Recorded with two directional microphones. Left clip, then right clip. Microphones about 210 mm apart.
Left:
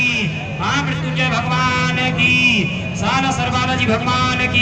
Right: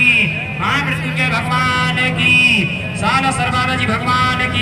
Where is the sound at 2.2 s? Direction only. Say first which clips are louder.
Right 3 dB; 50° left (ahead or behind).